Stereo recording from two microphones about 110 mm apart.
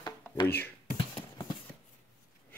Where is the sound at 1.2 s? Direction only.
40° left (ahead or behind).